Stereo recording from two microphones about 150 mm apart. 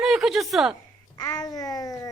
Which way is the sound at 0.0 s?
5° right (ahead or behind).